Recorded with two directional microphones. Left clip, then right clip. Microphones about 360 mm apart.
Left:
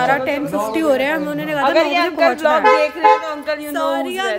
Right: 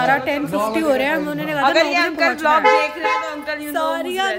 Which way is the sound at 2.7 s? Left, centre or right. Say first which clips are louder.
Left 3 dB; left.